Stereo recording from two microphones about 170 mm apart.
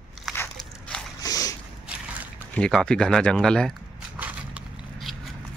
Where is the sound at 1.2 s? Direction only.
20° left (ahead or behind).